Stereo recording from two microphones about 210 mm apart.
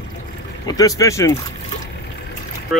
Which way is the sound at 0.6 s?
15° left (ahead or behind).